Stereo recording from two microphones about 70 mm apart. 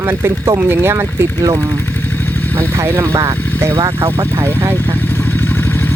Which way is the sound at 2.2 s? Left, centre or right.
Left.